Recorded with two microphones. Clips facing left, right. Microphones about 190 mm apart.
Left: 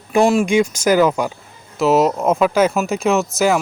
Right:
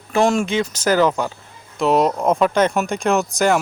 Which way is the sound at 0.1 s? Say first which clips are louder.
Left 3 dB; 10° left (ahead or behind).